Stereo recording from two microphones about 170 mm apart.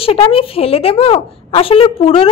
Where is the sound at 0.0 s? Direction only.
35° left (ahead or behind).